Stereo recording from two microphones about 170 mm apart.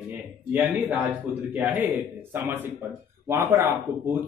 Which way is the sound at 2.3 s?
15° right (ahead or behind).